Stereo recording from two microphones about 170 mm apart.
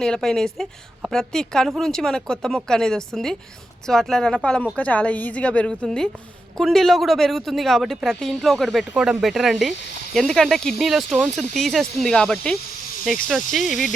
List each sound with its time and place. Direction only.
0.0 s a woman's voice: 5° left (ahead or behind)